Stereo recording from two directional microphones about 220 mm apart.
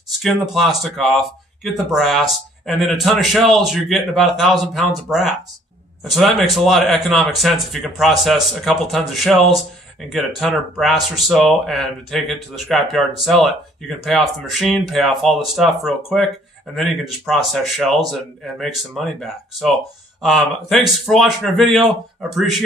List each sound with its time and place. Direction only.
0.2 s speech: centre (ahead or behind)